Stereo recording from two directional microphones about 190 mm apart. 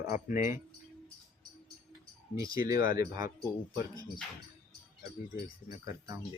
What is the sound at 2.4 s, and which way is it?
Speech, 20° right (ahead or behind).